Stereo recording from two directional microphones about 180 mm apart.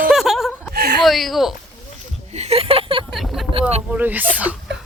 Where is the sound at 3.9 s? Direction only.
10° right (ahead or behind).